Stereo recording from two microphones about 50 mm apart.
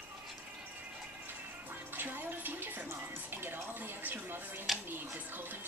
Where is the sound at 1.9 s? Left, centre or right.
Right.